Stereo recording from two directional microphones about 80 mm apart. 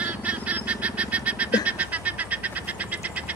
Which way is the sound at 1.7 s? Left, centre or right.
Centre.